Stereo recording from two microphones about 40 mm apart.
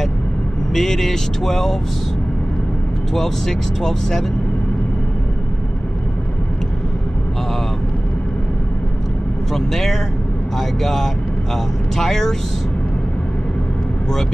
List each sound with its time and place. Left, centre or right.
0.7 s speech: centre
3.2 s speech: centre
9.5 s speech: centre